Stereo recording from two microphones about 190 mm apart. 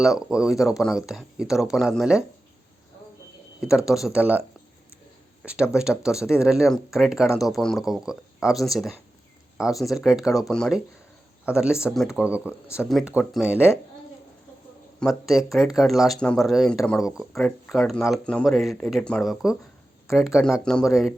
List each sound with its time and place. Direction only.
0.0 s speech: 5° right (ahead or behind)
0.5 s speech: 15° left (ahead or behind)
0.8 s speech: centre (ahead or behind)
3.6 s speech: 5° right (ahead or behind)
14.9 s speech: centre (ahead or behind)